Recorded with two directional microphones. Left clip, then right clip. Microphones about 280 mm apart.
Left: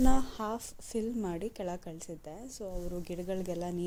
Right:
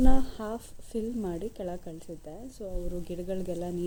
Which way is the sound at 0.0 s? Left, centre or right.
Left.